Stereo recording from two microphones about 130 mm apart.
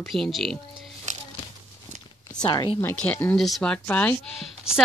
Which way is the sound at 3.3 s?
Centre (ahead or behind).